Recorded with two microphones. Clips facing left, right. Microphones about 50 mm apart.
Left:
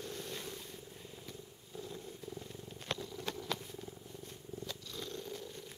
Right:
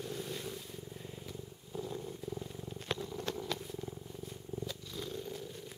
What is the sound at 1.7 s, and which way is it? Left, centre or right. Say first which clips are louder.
Purr: right 5 dB; centre.